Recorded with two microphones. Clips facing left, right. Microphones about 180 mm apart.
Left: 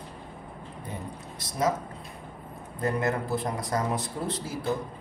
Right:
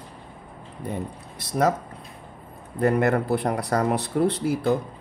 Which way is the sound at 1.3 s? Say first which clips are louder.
Right 5 dB; 65° right (ahead or behind).